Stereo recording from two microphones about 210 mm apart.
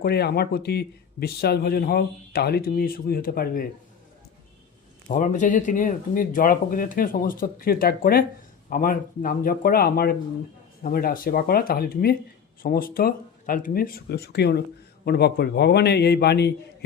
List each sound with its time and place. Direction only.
0.0 s speech: 50° left (ahead or behind)
5.0 s speech: 35° left (ahead or behind)